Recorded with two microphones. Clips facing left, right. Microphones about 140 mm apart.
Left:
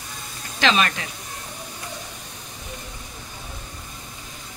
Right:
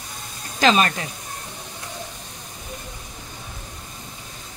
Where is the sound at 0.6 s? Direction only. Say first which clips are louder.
Right 3 dB; 40° right (ahead or behind).